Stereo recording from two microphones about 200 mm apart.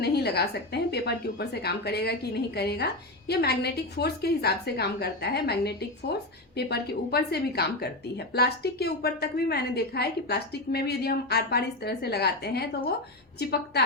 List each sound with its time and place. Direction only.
0.0 s a woman's voice: 55° left (ahead or behind)